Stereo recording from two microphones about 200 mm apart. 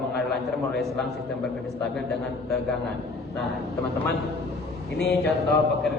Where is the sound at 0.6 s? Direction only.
Centre (ahead or behind).